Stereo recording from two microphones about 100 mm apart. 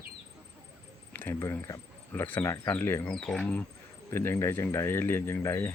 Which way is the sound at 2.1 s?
20° left (ahead or behind).